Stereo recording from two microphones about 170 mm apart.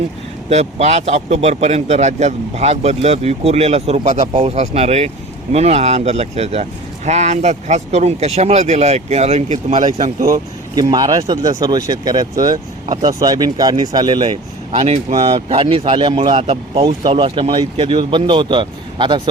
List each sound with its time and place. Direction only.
0.5 s a man's voice: 40° right (ahead or behind)
10.8 s speech: 20° right (ahead or behind)
14.8 s a man's voice: 40° right (ahead or behind)